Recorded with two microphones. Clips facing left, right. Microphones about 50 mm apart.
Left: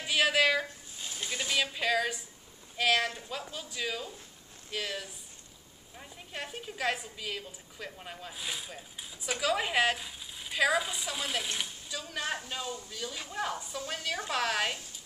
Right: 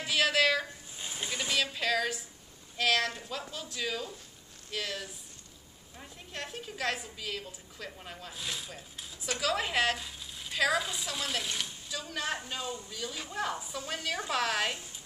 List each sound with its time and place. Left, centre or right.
0.0 s a sound: centre
0.9 s snake: centre
1.5 s a woman's voice: centre